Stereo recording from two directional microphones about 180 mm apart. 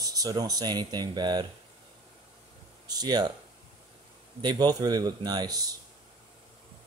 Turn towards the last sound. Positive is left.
turn(degrees=-20)  # may be behind; listen again after turning